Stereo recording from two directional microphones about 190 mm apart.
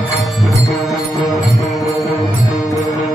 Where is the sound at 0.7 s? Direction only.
Centre (ahead or behind).